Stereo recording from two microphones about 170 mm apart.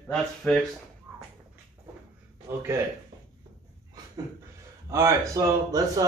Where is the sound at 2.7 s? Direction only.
15° right (ahead or behind).